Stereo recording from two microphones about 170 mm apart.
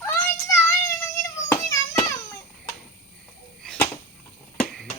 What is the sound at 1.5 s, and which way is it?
Hands, 15° left (ahead or behind).